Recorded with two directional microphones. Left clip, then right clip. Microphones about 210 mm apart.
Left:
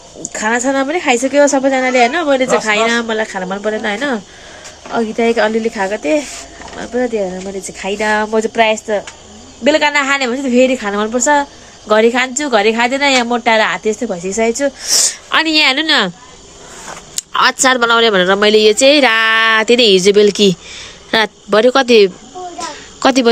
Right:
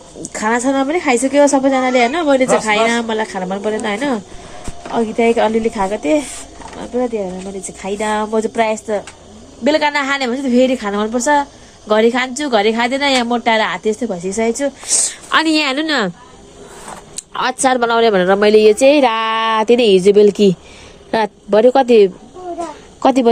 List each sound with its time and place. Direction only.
0.2 s a woman's voice: 5° left (ahead or behind)
17.2 s a woman's voice: 5° left (ahead or behind)